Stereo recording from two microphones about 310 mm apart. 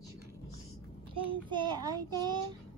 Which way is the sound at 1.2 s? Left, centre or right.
Centre.